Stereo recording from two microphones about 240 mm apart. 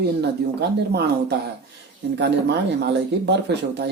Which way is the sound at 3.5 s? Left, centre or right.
Right.